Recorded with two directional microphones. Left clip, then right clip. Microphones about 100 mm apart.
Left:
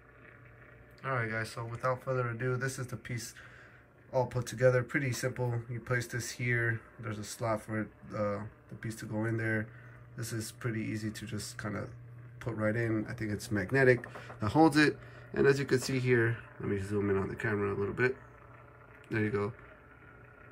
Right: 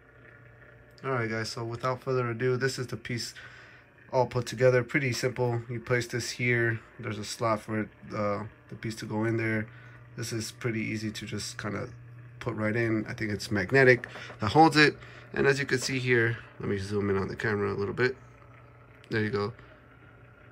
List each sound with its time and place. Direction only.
1.0 s speech: 20° right (ahead or behind)
1.8 s speech: 5° right (ahead or behind); by 16.2 s 15° left (ahead or behind)
16.2 s speech: centre (ahead or behind)